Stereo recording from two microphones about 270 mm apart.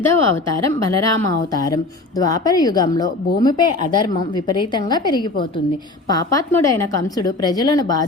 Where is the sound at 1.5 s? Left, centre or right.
Centre.